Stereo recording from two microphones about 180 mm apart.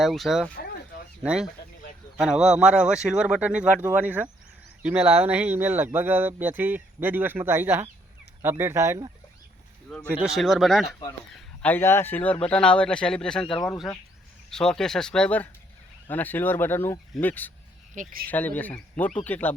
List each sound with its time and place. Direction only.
0.0 s speech: centre (ahead or behind); by 9.1 s 20° right (ahead or behind)
10.1 s speech: 5° right (ahead or behind); by 17.5 s 10° left (ahead or behind)
17.9 s speech: 50° right (ahead or behind)
18.3 s speech: 10° left (ahead or behind)